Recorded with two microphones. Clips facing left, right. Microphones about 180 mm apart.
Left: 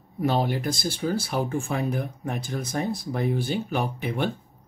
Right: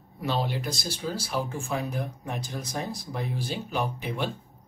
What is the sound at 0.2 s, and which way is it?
Speech, 50° left (ahead or behind).